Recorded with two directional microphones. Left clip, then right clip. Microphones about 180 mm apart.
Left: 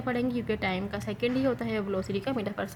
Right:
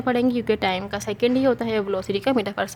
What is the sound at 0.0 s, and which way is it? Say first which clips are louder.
A woman's voice: right 9 dB; 45° right (ahead or behind).